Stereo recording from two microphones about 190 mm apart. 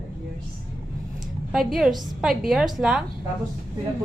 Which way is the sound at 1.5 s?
Centre (ahead or behind).